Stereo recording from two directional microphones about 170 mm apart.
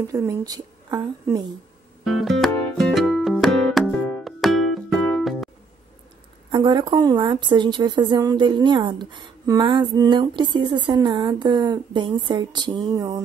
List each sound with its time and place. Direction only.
0.0 s a woman's voice: 20° right (ahead or behind)
2.0 s music: centre (ahead or behind)
6.5 s a woman's voice: 25° right (ahead or behind)